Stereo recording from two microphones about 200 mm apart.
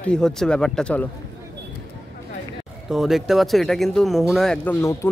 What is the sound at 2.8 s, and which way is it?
Speech, centre (ahead or behind).